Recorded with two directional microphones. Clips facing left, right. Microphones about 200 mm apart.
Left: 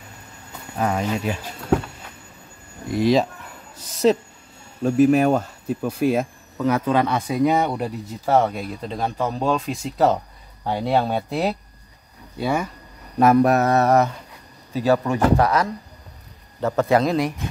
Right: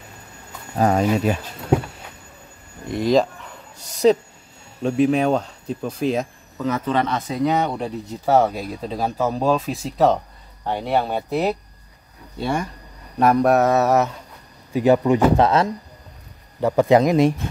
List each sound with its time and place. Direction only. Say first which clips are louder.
0.7 s speech: right 5 dB; 35° right (ahead or behind)
2.9 s speech: even; 5° left (ahead or behind)
10.6 s speech: left 1 dB; 10° left (ahead or behind)
12.4 s speech: left 1 dB; 5° left (ahead or behind)
14.7 s a man's voice: right 4 dB; 15° right (ahead or behind)